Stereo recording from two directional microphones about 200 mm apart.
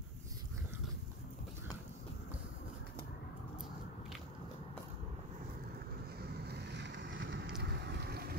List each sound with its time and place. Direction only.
6.1 s vehicle: 55° right (ahead or behind)
7.4 s boat: 55° right (ahead or behind)